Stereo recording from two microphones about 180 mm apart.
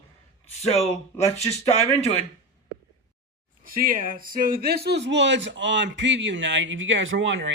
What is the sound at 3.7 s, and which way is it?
A man's voice, 50° right (ahead or behind).